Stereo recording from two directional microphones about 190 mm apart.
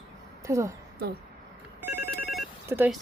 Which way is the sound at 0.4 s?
15° right (ahead or behind).